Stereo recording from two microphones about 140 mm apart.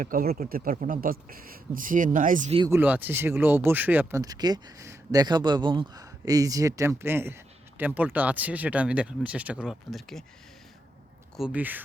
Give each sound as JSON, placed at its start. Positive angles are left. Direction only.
{"t": 0.0, "sound": "speech", "side_deg": -85}
{"t": 2.6, "sound": "speech", "side_deg": -15}
{"t": 4.2, "sound": "speech", "side_deg": -25}
{"t": 11.3, "sound": "speech", "side_deg": -10}